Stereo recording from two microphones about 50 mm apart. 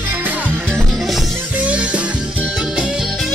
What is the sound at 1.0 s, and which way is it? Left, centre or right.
Music, centre.